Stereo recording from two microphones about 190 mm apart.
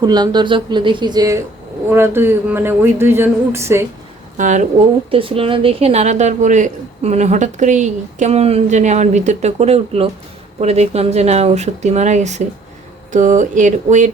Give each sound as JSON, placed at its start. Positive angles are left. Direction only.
{"t": 0.0, "sound": "speech", "side_deg": -20}
{"t": 4.4, "sound": "speech", "side_deg": -40}
{"t": 5.1, "sound": "a woman's voice", "side_deg": -30}